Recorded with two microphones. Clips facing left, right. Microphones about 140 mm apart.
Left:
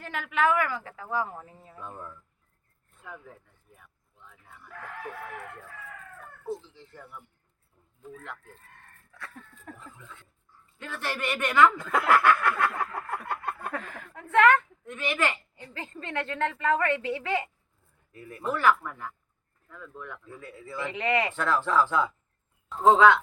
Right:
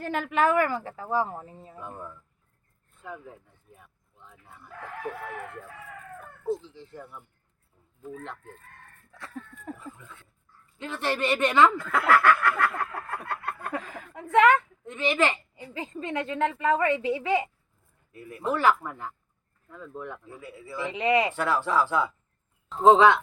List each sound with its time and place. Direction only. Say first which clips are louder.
0.0 s speech: right 2 dB; 40° right (ahead or behind)
1.8 s a woman's voice: right 1 dB; 10° right (ahead or behind)
3.8 s a sound: right 2 dB; 20° right (ahead or behind)
6.4 s speech: right 5 dB; 20° right (ahead or behind)
9.1 s a sound: right 5 dB; 25° right (ahead or behind)
9.8 s speech: right 4 dB; 5° right (ahead or behind)
10.8 s speech: right 5 dB; 20° right (ahead or behind)
11.8 s a sound: right 1 dB; 20° left (ahead or behind)
13.7 s a woman's voice: right 2 dB; 15° right (ahead or behind)
18.4 s speech: right 1 dB; 20° right (ahead or behind)
20.2 s a woman's voice: right 1 dB; 5° right (ahead or behind)
22.8 s speech: right 1 dB; 20° right (ahead or behind)